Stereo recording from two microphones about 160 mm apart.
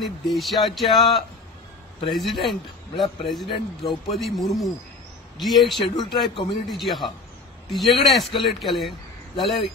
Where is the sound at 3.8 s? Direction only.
Centre (ahead or behind).